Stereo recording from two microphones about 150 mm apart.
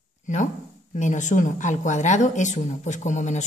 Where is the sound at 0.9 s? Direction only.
55° left (ahead or behind).